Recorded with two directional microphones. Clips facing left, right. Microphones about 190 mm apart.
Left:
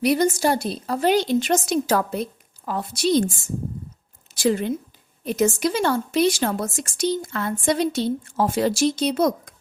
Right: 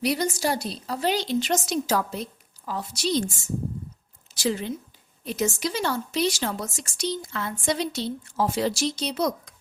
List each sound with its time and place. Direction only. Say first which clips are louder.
0.0 s a woman's voice: left 6 dB; 50° left (ahead or behind)
4.4 s a woman's voice: left 6 dB; 55° left (ahead or behind)